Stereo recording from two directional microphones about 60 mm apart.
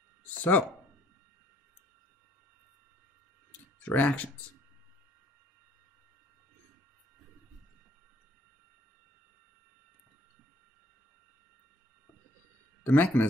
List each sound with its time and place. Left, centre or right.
0.4 s speech: left
3.8 s speech: left
12.8 s speech: left